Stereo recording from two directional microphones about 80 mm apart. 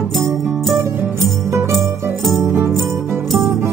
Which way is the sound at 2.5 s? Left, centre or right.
Right.